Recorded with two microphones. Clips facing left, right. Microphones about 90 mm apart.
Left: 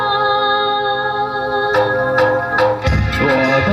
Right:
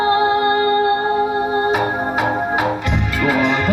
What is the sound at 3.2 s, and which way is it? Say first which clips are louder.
Music: left 3 dB; 75° left (ahead or behind).